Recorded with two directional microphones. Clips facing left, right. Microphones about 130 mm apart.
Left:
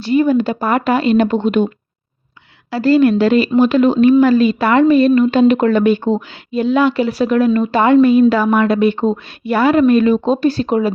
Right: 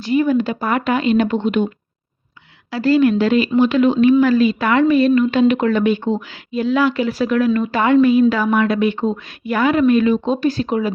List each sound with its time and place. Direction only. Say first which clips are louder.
0.0 s a woman's voice: left 3 dB; 30° left (ahead or behind)
2.7 s a woman's voice: left 3 dB; 30° left (ahead or behind)